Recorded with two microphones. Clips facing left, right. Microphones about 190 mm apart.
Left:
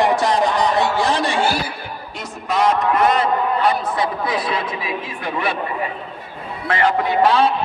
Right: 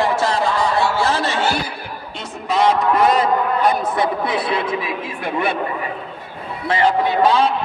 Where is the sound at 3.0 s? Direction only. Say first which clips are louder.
Right 1 dB; 35° right (ahead or behind).